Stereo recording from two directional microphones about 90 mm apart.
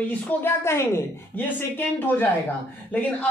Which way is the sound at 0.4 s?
30° left (ahead or behind).